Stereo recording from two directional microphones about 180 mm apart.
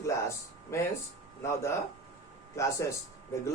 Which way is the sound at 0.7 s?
15° left (ahead or behind).